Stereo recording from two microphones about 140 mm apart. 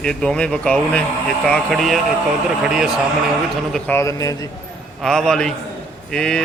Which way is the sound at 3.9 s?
20° left (ahead or behind).